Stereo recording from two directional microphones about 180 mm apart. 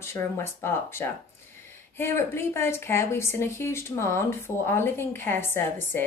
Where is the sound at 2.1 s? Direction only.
15° left (ahead or behind).